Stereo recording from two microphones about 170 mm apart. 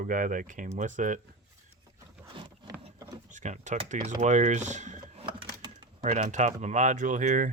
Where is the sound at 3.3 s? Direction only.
45° right (ahead or behind).